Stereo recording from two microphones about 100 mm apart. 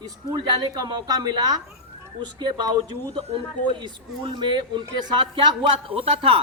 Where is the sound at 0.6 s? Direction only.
40° right (ahead or behind).